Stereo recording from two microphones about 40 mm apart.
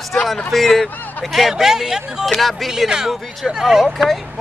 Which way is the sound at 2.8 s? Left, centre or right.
Centre.